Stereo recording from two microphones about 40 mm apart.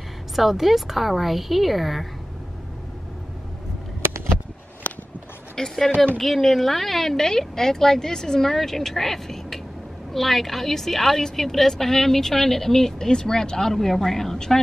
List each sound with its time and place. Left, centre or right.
0.4 s speech: centre
4.9 s a sound: left
5.6 s a woman's voice: centre